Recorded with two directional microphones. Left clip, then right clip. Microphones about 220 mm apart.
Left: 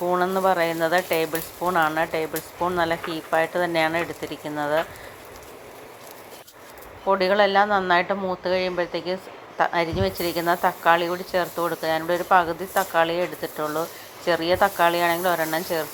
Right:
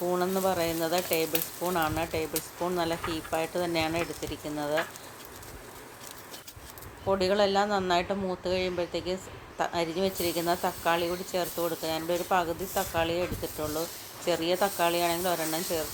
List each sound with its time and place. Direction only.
0.1 s a woman's voice: 5° left (ahead or behind)
7.1 s a woman's voice: 5° left (ahead or behind)